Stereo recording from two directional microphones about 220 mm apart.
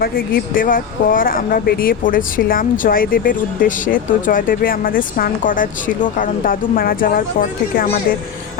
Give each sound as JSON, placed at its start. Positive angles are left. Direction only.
{"t": 0.0, "sound": "speech", "side_deg": 40}